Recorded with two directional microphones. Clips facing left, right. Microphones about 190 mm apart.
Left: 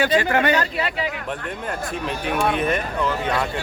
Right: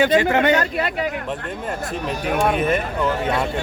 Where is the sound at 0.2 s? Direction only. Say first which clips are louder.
Right 2 dB; 20° right (ahead or behind).